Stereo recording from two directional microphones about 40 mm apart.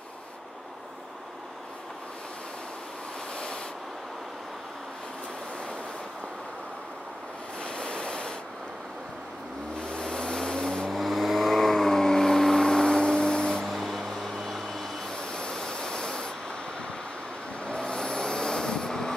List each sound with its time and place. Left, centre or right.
7.6 s waves: left
9.8 s vehicle: left
10.9 s vehicle: centre
13.7 s vehicle: centre
15.0 s a sound: centre
17.6 s vehicle: left